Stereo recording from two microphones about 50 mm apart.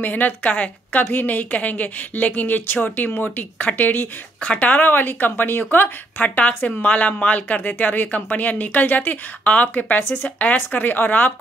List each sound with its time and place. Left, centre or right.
0.0 s speech: left
10.0 s speech: left
10.4 s speech: left